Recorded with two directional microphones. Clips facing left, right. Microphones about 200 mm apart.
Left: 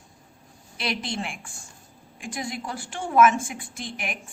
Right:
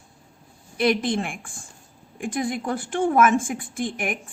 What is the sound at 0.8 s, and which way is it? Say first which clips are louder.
A woman's voice: right 9 dB; 55° right (ahead or behind).